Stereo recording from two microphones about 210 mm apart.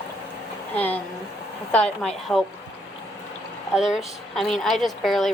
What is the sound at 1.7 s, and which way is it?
Speech, 5° left (ahead or behind).